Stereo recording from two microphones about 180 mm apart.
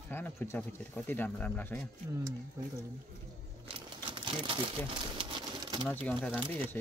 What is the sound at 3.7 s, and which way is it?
Crumpling, 30° right (ahead or behind).